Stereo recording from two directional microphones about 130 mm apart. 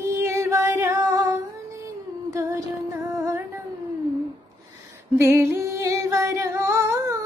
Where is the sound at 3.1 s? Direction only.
25° right (ahead or behind).